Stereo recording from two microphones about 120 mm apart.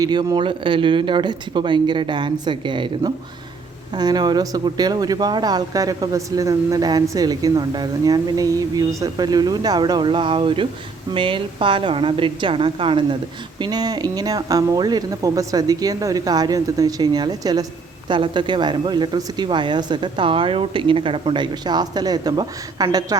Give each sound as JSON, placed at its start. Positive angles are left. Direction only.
{"t": 0.0, "sound": "a woman's voice", "side_deg": -35}
{"t": 13.6, "sound": "speech", "side_deg": -35}